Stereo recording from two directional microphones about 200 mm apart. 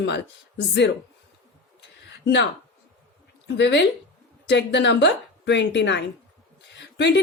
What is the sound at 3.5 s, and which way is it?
A woman's voice, 60° left (ahead or behind).